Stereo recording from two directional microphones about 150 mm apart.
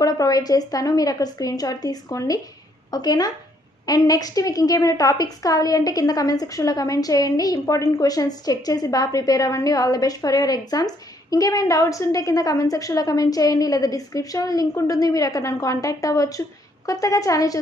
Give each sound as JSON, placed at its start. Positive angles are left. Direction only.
{"t": 0.0, "sound": "a woman's voice", "side_deg": 25}